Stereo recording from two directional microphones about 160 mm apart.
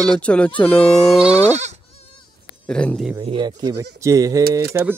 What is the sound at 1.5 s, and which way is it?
Speech, 45° right (ahead or behind).